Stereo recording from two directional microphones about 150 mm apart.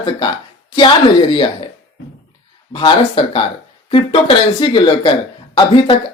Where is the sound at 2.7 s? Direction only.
35° left (ahead or behind).